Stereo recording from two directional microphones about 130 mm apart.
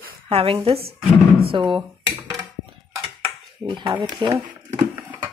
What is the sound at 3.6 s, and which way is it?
Speech, 40° right (ahead or behind).